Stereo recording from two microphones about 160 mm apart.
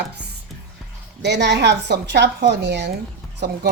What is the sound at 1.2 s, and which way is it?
A woman's voice, 90° right.